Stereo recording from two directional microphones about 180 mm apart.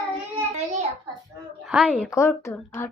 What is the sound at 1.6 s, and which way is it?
Speech, 5° right (ahead or behind).